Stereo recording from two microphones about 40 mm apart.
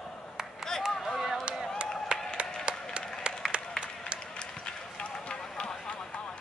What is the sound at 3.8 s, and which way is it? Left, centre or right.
Applause, left.